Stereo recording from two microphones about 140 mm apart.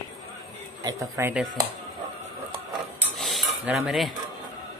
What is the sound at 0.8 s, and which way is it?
Speech, 20° right (ahead or behind).